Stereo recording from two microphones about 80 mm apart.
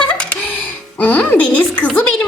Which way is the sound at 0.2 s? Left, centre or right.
Centre.